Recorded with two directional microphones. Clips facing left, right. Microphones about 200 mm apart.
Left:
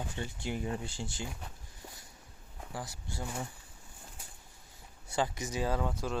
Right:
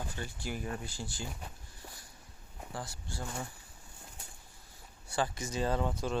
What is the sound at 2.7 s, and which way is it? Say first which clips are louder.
Speech: left 1 dB; 20° left (ahead or behind).